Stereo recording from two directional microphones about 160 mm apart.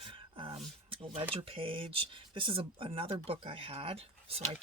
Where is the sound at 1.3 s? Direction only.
35° right (ahead or behind).